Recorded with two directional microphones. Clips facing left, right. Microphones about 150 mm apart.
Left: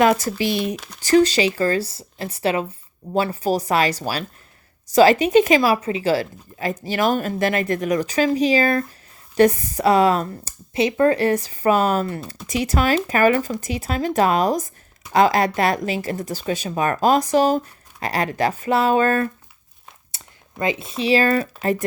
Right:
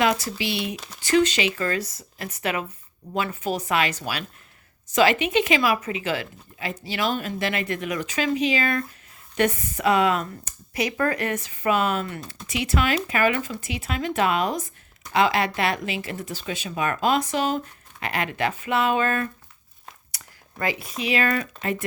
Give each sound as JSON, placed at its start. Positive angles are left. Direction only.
{"t": 0.0, "sound": "speech", "side_deg": 45}
{"t": 20.1, "sound": "speech", "side_deg": 25}